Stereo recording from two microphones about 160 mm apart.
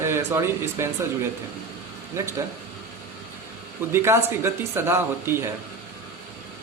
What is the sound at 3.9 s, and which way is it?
A man's voice, 15° right (ahead or behind).